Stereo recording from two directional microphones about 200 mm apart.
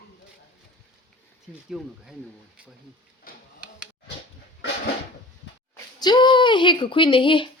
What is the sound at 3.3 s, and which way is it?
Tick-tock, 45° left (ahead or behind).